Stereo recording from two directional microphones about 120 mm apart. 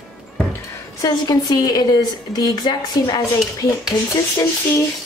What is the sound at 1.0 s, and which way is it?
Speech, 30° left (ahead or behind).